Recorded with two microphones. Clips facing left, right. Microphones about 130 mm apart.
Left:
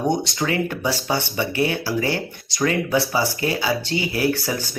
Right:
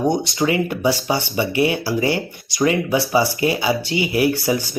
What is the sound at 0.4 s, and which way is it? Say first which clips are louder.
Speech: right 5 dB; 10° right (ahead or behind).